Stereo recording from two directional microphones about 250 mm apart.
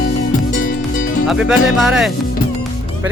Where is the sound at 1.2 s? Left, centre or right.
Centre.